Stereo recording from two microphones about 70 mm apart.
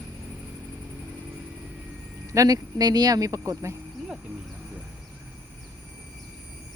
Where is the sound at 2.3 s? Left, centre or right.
Right.